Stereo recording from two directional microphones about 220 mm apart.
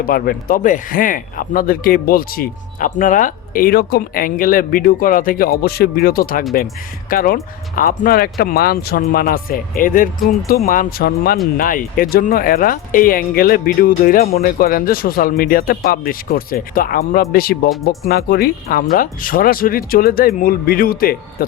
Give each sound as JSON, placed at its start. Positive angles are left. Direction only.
{"t": 0.0, "sound": "speech", "side_deg": 40}